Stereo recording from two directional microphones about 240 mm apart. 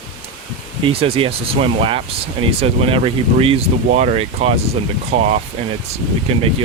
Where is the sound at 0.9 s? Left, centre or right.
Right.